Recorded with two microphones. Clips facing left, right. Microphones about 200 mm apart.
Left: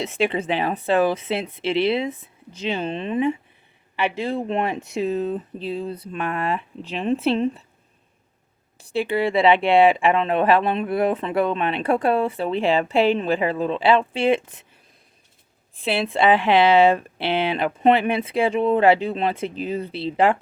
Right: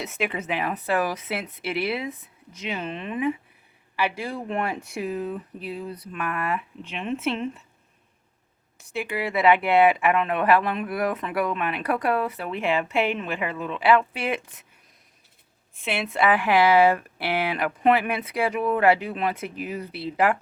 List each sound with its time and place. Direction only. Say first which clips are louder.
0.0 s speech: left 6 dB; 30° left (ahead or behind)
8.8 s speech: left 7 dB; 30° left (ahead or behind)
15.7 s speech: left 5 dB; 35° left (ahead or behind)